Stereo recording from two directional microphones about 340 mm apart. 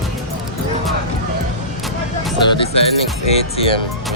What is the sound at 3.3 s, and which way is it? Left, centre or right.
Speech, centre.